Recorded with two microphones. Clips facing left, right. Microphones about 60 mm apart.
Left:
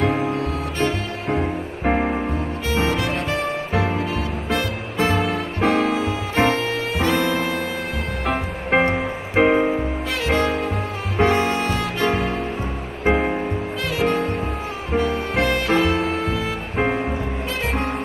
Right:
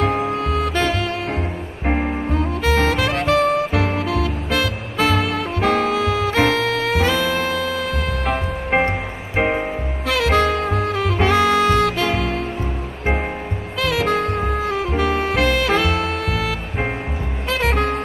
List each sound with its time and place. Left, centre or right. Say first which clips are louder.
0.0 s music: right 1 dB; centre
0.3 s music: right 4 dB; right
2.3 s music: right 4 dB; right
8.3 s music: left 1 dB; centre
10.1 s music: right 4 dB; right
13.8 s music: right 2 dB; right